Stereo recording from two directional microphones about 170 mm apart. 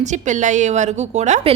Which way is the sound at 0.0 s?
45° right (ahead or behind).